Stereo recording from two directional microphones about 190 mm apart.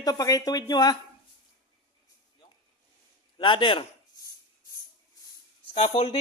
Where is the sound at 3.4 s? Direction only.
25° left (ahead or behind).